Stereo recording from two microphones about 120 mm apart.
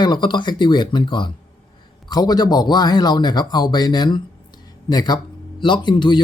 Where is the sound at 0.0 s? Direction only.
40° left (ahead or behind).